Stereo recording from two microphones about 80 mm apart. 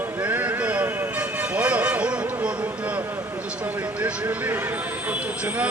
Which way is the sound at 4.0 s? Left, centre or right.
Right.